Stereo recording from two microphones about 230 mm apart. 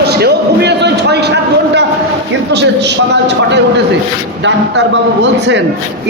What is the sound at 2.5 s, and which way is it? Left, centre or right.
A man's voice, right.